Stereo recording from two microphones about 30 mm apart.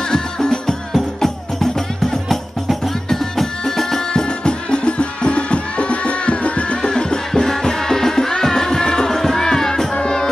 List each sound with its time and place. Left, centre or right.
0.1 s music: left
2.2 s music: centre
3.1 s music: centre
4.1 s music: left
6.8 s music: left